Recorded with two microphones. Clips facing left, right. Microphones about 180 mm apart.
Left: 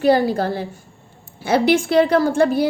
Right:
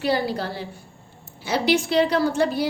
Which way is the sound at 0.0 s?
50° left (ahead or behind).